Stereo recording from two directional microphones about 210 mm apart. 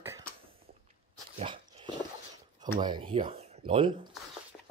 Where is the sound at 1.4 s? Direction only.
25° right (ahead or behind).